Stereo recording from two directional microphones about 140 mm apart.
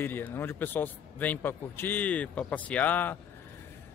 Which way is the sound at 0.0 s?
15° left (ahead or behind).